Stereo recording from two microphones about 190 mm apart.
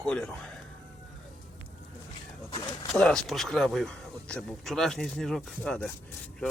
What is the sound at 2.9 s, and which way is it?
Speech, centre (ahead or behind).